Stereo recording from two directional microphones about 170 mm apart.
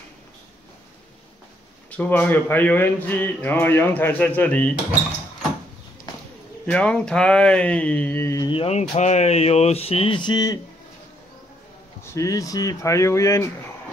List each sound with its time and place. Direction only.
1.9 s speech: 10° left (ahead or behind)
6.6 s speech: 5° left (ahead or behind)
8.5 s speech: 35° left (ahead or behind)
12.0 s speech: 15° left (ahead or behind)